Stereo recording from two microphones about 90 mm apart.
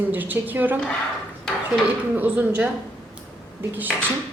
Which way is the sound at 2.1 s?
20° right (ahead or behind).